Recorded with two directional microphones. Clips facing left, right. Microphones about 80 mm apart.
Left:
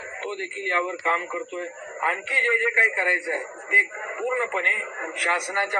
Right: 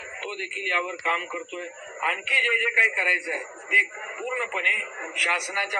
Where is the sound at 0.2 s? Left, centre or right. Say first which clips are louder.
Left 2 dB; left.